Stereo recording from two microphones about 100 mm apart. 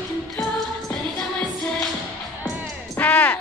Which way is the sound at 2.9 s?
20° left (ahead or behind).